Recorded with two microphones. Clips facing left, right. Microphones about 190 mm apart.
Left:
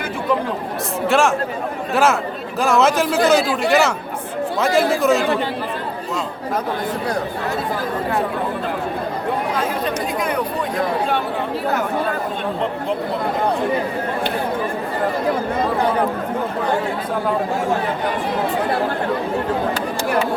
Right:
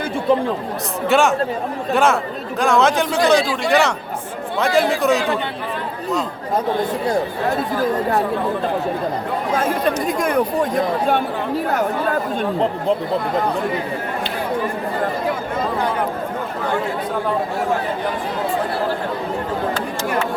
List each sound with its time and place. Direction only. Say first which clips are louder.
1.0 s a man's voice: right 1 dB; centre (ahead or behind)
10.2 s chatter: right 4 dB; 45° right (ahead or behind)